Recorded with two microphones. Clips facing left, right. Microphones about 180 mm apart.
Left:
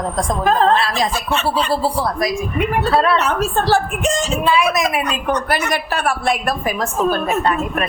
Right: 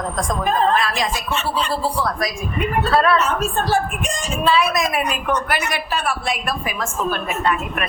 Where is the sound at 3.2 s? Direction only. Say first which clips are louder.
Left 2 dB; 75° left (ahead or behind).